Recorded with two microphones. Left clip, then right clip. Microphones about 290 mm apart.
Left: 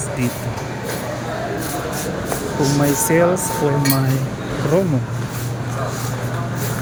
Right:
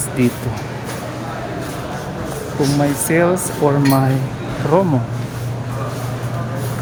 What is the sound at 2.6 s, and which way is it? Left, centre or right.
Speech, centre.